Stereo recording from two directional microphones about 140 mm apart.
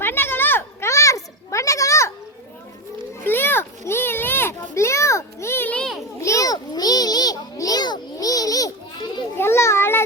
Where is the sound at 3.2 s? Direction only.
15° left (ahead or behind).